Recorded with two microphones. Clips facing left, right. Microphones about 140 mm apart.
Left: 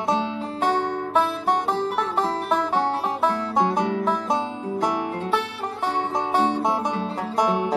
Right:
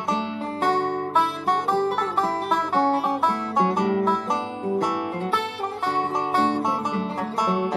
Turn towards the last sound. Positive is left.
turn(degrees=10)  # may be behind; listen again after turning